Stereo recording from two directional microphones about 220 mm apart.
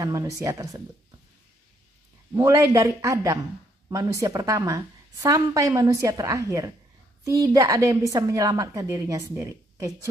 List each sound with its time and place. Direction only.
0.0 s a woman's voice: 15° right (ahead or behind)
2.3 s a woman's voice: 15° right (ahead or behind)